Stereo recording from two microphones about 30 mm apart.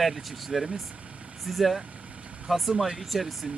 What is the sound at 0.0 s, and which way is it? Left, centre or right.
Speech, centre.